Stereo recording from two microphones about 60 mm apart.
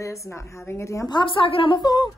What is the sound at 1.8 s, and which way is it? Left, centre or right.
Speech, left.